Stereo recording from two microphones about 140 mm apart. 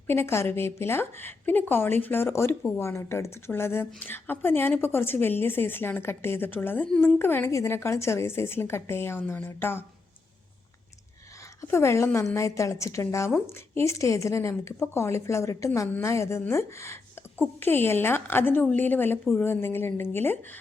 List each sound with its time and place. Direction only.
0.1 s a woman's voice: 15° left (ahead or behind)
11.7 s a woman's voice: 20° left (ahead or behind)
19.2 s a woman's voice: centre (ahead or behind)
19.5 s a woman's voice: 15° left (ahead or behind)